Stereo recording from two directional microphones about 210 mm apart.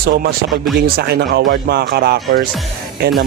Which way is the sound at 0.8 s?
45° right (ahead or behind).